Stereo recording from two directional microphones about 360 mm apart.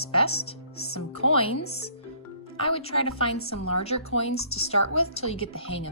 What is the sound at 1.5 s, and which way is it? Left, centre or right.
Speech, left.